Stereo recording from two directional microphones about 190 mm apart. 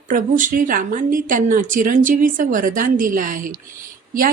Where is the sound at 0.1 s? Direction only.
45° right (ahead or behind).